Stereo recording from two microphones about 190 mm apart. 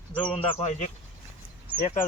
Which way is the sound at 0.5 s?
35° left (ahead or behind).